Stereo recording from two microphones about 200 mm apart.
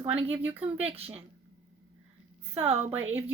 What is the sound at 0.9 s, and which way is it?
Speech, 30° right (ahead or behind).